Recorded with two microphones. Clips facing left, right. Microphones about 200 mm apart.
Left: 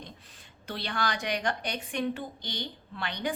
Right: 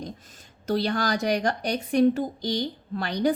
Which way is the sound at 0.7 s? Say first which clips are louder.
Right 8 dB; 40° right (ahead or behind).